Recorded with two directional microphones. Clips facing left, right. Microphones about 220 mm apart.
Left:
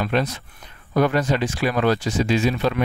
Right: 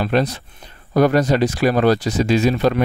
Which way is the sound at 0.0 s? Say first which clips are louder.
Right 4 dB; 35° right (ahead or behind).